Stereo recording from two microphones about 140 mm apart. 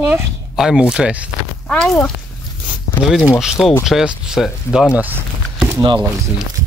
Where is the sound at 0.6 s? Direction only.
5° right (ahead or behind).